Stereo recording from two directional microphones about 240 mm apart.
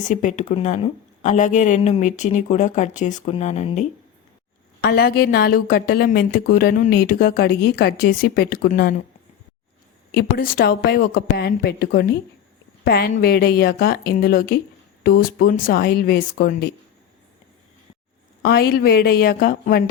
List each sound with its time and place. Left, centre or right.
0.1 s a woman's voice: left
4.8 s a woman's voice: left
10.1 s a woman's voice: left
18.4 s a woman's voice: left